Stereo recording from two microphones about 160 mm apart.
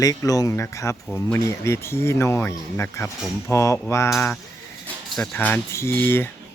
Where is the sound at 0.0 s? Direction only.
20° left (ahead or behind).